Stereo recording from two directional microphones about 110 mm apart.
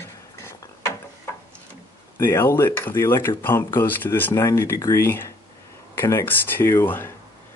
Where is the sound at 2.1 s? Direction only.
25° left (ahead or behind).